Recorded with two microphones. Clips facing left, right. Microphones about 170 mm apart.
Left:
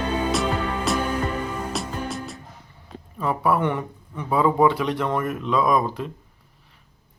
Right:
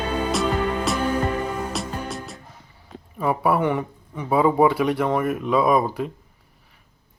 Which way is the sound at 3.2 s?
10° right (ahead or behind).